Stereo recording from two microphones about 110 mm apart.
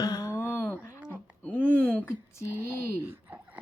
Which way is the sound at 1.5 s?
15° right (ahead or behind).